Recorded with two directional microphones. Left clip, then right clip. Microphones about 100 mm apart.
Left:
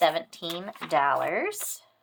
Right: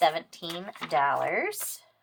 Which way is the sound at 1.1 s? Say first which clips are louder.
Left 1 dB; 30° left (ahead or behind).